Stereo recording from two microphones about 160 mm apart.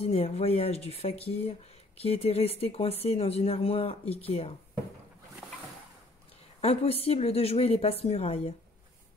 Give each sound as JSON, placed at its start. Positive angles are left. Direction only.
{"t": 0.0, "sound": "speech", "side_deg": 40}
{"t": 6.6, "sound": "speech", "side_deg": 40}